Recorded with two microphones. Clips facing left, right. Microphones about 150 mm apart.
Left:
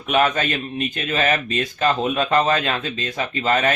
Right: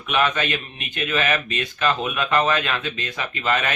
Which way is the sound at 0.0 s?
40° left (ahead or behind).